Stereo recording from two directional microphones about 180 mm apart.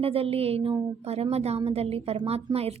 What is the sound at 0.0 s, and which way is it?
A woman's voice, 30° right (ahead or behind).